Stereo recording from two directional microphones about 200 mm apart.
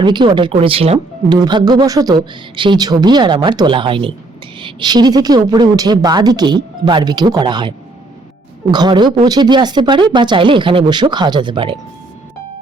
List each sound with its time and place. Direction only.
0.0 s speech: 25° right (ahead or behind)
8.7 s speech: 20° right (ahead or behind)